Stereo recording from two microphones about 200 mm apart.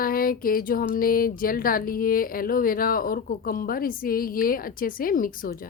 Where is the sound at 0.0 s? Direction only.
45° left (ahead or behind).